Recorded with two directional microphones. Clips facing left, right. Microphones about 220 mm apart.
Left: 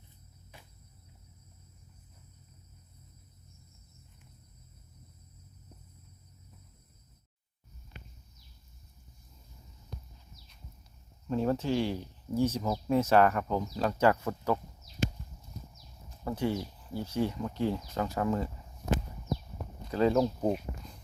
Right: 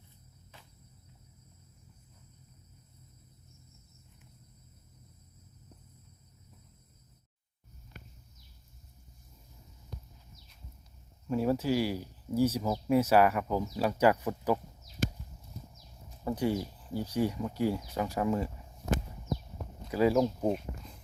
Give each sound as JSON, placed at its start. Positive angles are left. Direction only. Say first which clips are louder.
{"t": 0.5, "sound": "cricket", "louder": "left 2 dB", "side_deg": 15}
{"t": 11.3, "sound": "speech", "louder": "right 1 dB", "side_deg": -10}
{"t": 16.2, "sound": "speech", "louder": "right 1 dB", "side_deg": -15}
{"t": 19.9, "sound": "speech", "louder": "even", "side_deg": -10}
{"t": 20.4, "sound": "speech", "louder": "even", "side_deg": 0}